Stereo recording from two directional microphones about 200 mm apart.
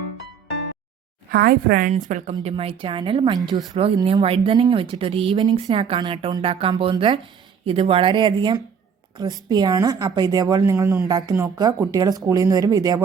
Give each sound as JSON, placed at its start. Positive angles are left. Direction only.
{"t": 1.3, "sound": "a woman's voice", "side_deg": -50}
{"t": 1.9, "sound": "speech", "side_deg": -35}